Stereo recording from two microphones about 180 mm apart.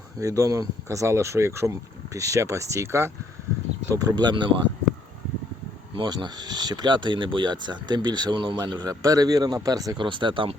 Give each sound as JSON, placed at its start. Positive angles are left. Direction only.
{"t": 0.2, "sound": "speech", "side_deg": -20}
{"t": 5.9, "sound": "speech", "side_deg": -25}